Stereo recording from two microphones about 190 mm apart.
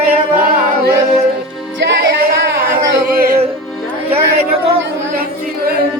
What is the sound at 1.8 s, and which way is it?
Music, 60° right (ahead or behind).